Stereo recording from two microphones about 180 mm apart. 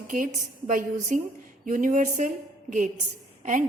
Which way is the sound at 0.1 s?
45° right (ahead or behind).